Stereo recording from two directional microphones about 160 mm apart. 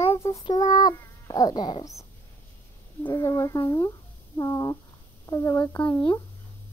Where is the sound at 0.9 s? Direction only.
25° left (ahead or behind).